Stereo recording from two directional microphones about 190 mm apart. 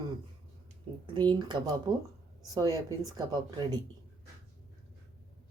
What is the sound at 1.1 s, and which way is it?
A woman's voice, 25° right (ahead or behind).